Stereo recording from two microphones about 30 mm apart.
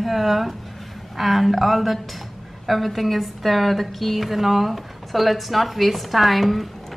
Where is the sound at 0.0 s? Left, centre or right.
Centre.